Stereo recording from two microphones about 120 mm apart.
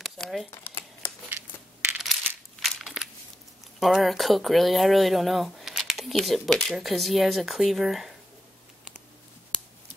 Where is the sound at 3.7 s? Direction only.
Centre (ahead or behind).